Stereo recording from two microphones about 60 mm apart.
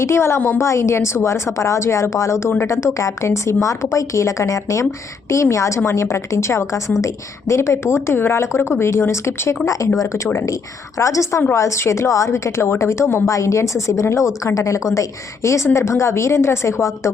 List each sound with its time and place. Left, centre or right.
0.0 s a woman's voice: left
9.6 s a woman's voice: left
13.2 s a woman's voice: left